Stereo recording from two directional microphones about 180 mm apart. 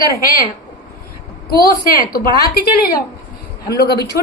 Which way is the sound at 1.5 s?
55° left (ahead or behind).